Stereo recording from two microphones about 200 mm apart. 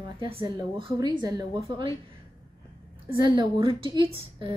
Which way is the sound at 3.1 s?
25° right (ahead or behind).